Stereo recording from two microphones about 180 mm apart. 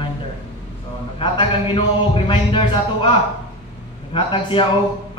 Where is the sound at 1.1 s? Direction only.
30° left (ahead or behind).